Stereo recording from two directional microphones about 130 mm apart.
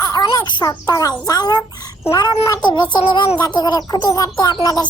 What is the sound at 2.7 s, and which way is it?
Music, 35° left (ahead or behind).